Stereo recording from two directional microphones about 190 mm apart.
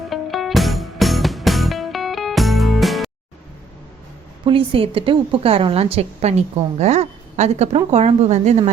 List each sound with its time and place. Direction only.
0.1 s music: centre (ahead or behind)
4.4 s a woman's voice: 30° right (ahead or behind)